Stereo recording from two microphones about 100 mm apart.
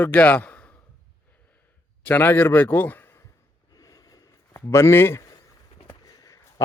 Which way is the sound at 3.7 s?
40° left (ahead or behind).